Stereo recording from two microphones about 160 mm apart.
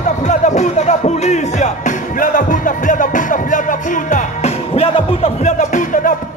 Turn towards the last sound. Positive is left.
turn(degrees=50)  # may be behind; listen again after turning